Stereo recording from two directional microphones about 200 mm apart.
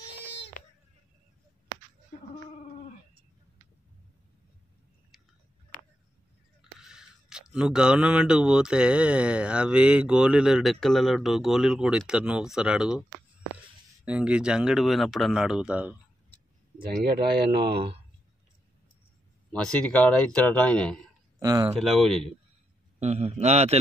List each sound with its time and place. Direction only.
5.1 s chewing: centre (ahead or behind)
6.8 s speech: 5° right (ahead or behind)
14.0 s speech: 5° right (ahead or behind)
16.8 s speech: 50° right (ahead or behind)
19.5 s speech: 5° left (ahead or behind)
21.4 s speech: 20° right (ahead or behind)
21.7 s speech: centre (ahead or behind)
22.9 s a man's voice: 35° right (ahead or behind)